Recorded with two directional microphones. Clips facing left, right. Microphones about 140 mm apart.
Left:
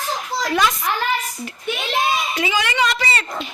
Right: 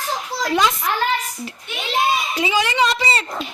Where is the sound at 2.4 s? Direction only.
30° right (ahead or behind).